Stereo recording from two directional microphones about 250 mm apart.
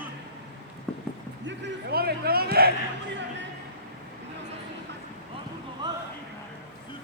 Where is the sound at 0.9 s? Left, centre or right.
Centre.